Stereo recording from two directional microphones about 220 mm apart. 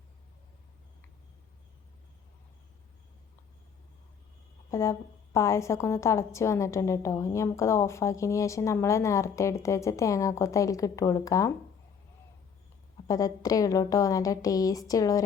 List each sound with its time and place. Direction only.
4.7 s a woman's voice: 15° left (ahead or behind)
13.1 s a woman's voice: 15° left (ahead or behind)